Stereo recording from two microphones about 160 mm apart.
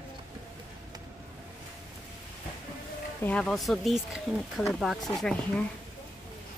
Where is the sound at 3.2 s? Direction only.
5° left (ahead or behind).